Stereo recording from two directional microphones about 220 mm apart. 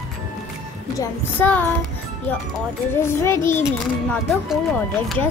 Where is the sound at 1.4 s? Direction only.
10° left (ahead or behind).